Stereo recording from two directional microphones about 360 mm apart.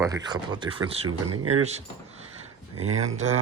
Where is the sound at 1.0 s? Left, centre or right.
Right.